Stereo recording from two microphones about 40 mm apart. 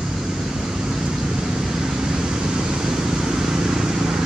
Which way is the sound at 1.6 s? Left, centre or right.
Centre.